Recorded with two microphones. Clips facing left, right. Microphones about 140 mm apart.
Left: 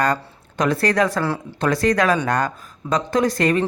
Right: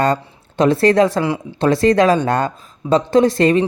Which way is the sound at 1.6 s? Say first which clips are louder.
Right 6 dB; 25° right (ahead or behind).